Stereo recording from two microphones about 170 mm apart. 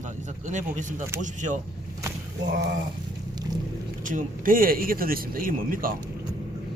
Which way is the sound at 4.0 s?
50° right (ahead or behind).